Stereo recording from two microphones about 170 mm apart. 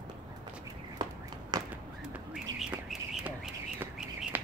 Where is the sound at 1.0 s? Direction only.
25° right (ahead or behind).